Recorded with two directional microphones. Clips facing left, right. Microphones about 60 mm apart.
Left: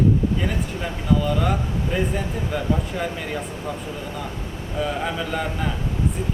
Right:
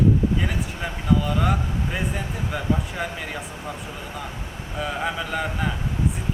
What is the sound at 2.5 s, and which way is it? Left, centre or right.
Speech, centre.